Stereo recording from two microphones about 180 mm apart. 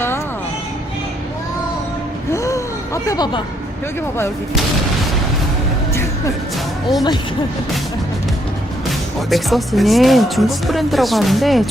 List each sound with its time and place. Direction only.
2.3 s gasp: 15° left (ahead or behind)
5.9 s music: 15° left (ahead or behind)
8.9 s speech: centre (ahead or behind)